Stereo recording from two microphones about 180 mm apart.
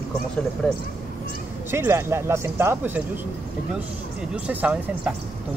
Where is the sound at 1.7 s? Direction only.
15° right (ahead or behind).